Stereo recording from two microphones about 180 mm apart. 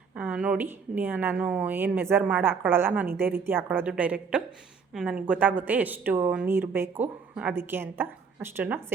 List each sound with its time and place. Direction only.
0.1 s a woman's voice: 5° right (ahead or behind)